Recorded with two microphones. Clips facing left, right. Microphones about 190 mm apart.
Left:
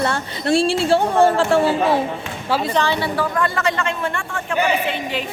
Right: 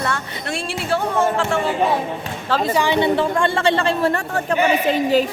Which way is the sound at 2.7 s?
15° right (ahead or behind).